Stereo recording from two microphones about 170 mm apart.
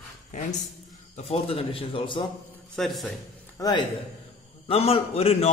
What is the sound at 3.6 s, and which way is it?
Speech, 20° left (ahead or behind).